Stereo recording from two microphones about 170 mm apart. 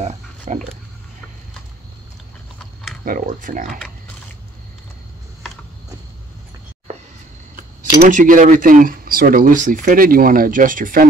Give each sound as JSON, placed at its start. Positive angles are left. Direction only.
{"t": 0.0, "sound": "a sound", "side_deg": -45}
{"t": 3.1, "sound": "speech", "side_deg": -50}
{"t": 8.0, "sound": "speech", "side_deg": -50}